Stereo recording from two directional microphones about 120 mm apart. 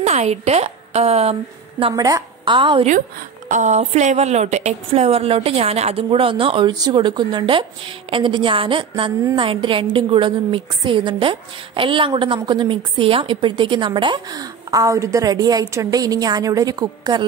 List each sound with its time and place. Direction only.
0.0 s a woman's voice: 65° right (ahead or behind)
2.0 s a woman's voice: 30° right (ahead or behind)
2.5 s a woman's voice: 45° right (ahead or behind)
3.4 s a woman's voice: 90° right; by 17.2 s 35° right (ahead or behind)